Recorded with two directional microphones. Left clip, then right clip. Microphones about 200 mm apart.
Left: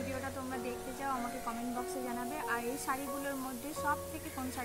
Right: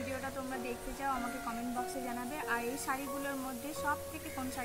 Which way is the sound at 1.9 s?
10° right (ahead or behind).